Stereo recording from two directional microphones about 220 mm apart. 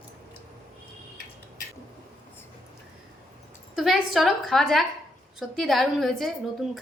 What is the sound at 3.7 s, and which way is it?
A woman's voice, centre (ahead or behind).